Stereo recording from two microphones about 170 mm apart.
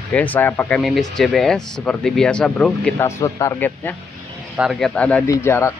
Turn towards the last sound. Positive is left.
turn(degrees=15)  # may be behind; listen again after turning